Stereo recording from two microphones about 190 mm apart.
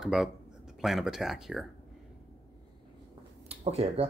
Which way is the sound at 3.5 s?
30° right (ahead or behind).